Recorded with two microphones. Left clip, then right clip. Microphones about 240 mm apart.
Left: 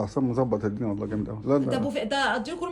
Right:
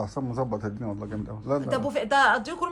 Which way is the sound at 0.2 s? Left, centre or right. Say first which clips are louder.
Left 5 dB; left.